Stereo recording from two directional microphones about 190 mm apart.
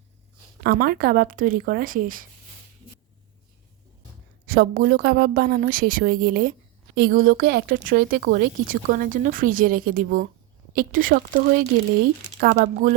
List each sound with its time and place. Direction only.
0.6 s a woman's voice: 50° right (ahead or behind)
4.4 s a woman's voice: 50° right (ahead or behind)
12.4 s speech: 65° right (ahead or behind)